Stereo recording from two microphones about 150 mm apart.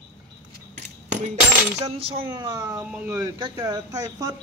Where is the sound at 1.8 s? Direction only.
40° right (ahead or behind).